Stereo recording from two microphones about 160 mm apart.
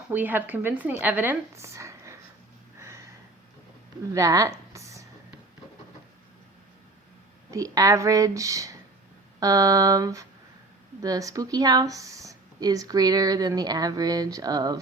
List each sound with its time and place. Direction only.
0.1 s speech: 10° right (ahead or behind)
2.7 s a sound: 15° right (ahead or behind)
4.1 s speech: 20° right (ahead or behind)
7.5 s speech: 20° right (ahead or behind)